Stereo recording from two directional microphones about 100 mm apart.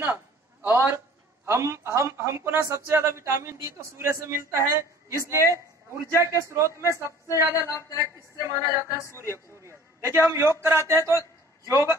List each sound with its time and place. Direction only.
0.0 s a man's voice: 20° right (ahead or behind)
7.6 s a woman's voice: 35° left (ahead or behind)
8.0 s a woman's voice: 30° right (ahead or behind)
8.8 s a woman's voice: 30° left (ahead or behind)
9.6 s a man's voice: 25° right (ahead or behind)